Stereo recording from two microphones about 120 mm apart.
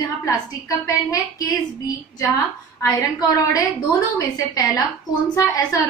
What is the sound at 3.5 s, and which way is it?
A woman's voice, 30° left (ahead or behind).